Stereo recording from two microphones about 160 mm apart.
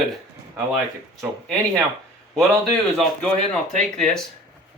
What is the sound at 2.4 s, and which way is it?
Speech, centre (ahead or behind).